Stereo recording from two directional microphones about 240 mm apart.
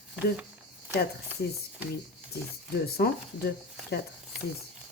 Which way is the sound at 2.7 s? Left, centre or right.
Left.